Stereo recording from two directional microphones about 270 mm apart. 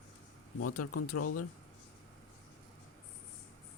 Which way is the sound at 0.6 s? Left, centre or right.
Left.